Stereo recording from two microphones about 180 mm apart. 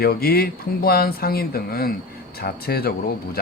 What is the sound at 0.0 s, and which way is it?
Speech, 60° left (ahead or behind).